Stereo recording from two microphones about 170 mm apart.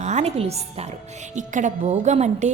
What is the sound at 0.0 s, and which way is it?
A woman's voice, 40° right (ahead or behind).